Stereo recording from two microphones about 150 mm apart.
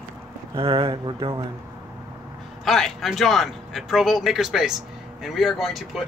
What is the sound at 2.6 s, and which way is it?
A man's voice, centre (ahead or behind).